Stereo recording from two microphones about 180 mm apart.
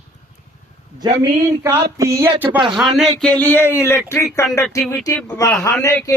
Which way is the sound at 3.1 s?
5° left (ahead or behind).